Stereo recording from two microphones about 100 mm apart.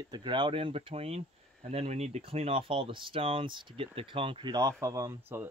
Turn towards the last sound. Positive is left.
turn(degrees=-25)  # may be behind; listen again after turning